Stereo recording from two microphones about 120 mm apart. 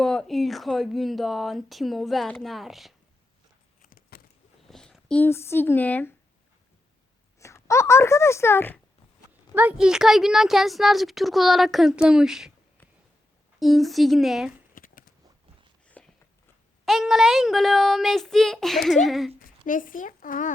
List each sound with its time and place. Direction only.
0.0 s a woman's voice: 5° left (ahead or behind)
4.7 s a sound: 5° left (ahead or behind)
5.2 s a woman's voice: 20° left (ahead or behind)
7.3 s speech: 25° left (ahead or behind)
9.6 s a woman's voice: 10° right (ahead or behind)
13.6 s a woman's voice: centre (ahead or behind)
16.0 s a sound: 10° left (ahead or behind)
16.8 s a woman's voice: centre (ahead or behind)
19.6 s speech: 90° left